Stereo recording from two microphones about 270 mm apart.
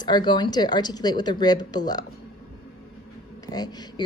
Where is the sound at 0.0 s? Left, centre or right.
Centre.